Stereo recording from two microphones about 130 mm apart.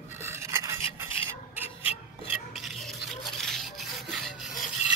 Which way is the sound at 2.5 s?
Centre (ahead or behind).